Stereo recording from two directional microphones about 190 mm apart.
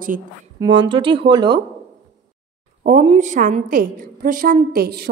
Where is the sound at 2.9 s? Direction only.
40° right (ahead or behind); by 5.1 s 55° right (ahead or behind).